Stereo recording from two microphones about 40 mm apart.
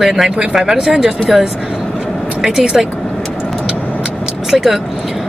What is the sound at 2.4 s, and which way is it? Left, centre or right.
Speech, centre.